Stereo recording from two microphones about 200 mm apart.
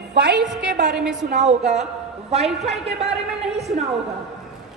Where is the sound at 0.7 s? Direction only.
60° right (ahead or behind).